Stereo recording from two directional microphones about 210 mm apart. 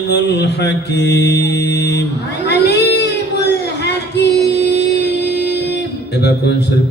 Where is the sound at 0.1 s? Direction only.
55° left (ahead or behind).